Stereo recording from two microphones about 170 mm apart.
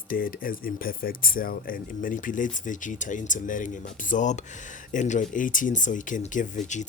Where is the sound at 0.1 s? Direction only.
55° left (ahead or behind).